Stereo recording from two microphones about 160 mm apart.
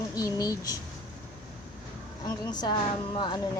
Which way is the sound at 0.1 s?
20° left (ahead or behind).